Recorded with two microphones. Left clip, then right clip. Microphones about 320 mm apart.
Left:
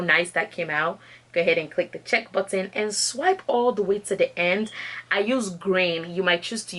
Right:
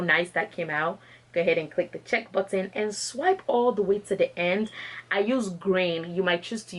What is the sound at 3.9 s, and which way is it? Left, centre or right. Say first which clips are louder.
Speech: left 2 dB; centre.